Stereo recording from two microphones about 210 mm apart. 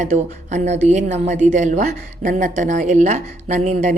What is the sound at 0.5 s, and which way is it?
A woman's voice, 35° right (ahead or behind).